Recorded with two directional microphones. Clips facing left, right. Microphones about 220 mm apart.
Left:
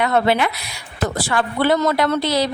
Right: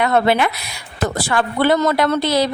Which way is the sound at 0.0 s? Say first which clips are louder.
Right 2 dB; 55° right (ahead or behind).